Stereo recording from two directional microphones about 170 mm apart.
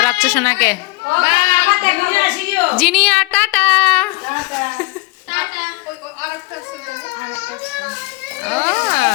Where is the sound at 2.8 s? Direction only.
Centre (ahead or behind).